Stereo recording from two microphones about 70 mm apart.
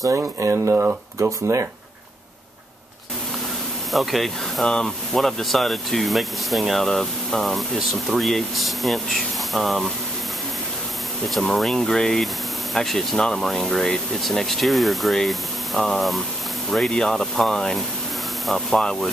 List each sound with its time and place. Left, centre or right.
0.0 s speech: right
0.7 s speech: right
3.9 s speech: centre
11.2 s speech: centre